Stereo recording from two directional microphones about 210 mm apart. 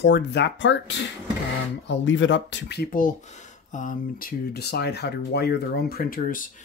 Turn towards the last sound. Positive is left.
turn(degrees=40)  # may be behind; listen again after turning